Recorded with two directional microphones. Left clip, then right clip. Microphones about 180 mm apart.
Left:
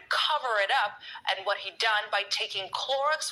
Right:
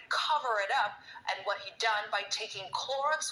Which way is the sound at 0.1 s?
30° left (ahead or behind).